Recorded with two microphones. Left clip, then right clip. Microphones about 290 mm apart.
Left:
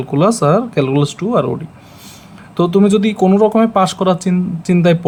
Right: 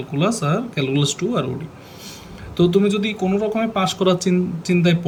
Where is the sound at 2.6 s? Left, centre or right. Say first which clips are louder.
Left 5 dB; centre.